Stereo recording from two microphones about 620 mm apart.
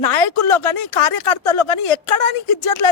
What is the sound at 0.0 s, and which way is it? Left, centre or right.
Speech, left.